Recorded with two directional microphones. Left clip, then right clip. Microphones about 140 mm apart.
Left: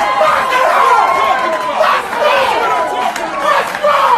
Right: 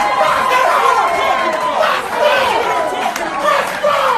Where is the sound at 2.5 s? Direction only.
25° left (ahead or behind).